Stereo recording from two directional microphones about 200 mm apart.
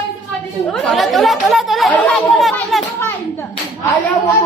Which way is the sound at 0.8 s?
Centre (ahead or behind).